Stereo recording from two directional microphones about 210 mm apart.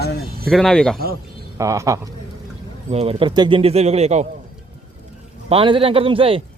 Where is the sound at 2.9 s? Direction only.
25° right (ahead or behind).